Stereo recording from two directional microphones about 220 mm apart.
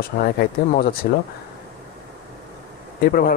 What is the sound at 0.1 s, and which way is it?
Speech, 45° left (ahead or behind).